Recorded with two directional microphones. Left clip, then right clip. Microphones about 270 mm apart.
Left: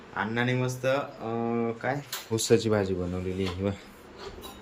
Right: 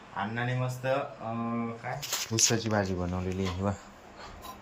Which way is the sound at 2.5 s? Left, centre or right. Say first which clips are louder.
Left 5 dB; centre.